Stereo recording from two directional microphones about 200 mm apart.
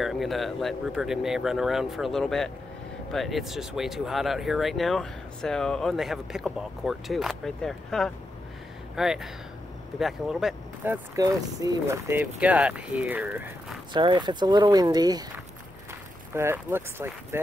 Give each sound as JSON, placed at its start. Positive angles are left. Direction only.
{"t": 0.0, "sound": "speech", "side_deg": 0}
{"t": 13.9, "sound": "speech", "side_deg": -25}